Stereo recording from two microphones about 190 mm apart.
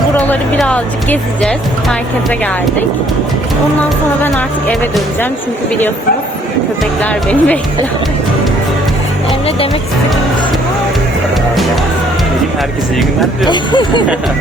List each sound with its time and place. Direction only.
0.3 s a woman's voice: 5° left (ahead or behind)
4.2 s speech: 10° left (ahead or behind)
7.0 s speech: 5° left (ahead or behind)
13.5 s speech: 25° left (ahead or behind)